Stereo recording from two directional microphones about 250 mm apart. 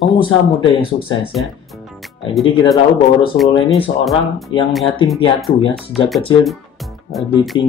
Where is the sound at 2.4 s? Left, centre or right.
Centre.